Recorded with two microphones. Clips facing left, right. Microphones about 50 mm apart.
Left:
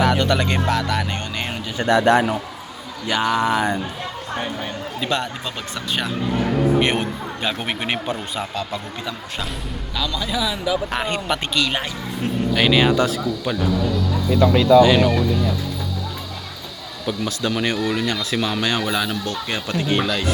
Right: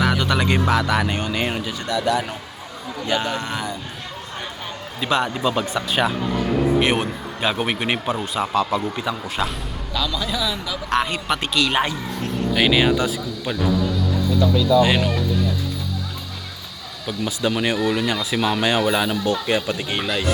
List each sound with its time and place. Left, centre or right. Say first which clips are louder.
0.0 s speech: left 2 dB; centre
1.9 s a man's voice: left 6 dB; left
3.1 s speech: left 5 dB; centre
4.9 s speech: right 4 dB; centre
6.7 s a man's voice: even; centre
14.4 s speech: left 5 dB; left
17.2 s speech: right 2 dB; centre